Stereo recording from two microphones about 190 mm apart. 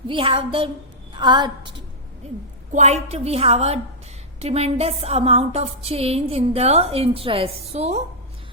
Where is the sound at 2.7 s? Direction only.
35° right (ahead or behind).